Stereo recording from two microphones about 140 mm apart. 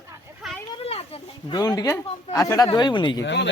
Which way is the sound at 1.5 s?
25° left (ahead or behind).